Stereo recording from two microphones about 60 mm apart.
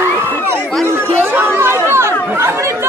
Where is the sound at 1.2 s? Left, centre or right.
Right.